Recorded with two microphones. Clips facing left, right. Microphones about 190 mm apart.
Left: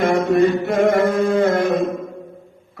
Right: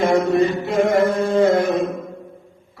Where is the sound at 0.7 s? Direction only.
60° left (ahead or behind).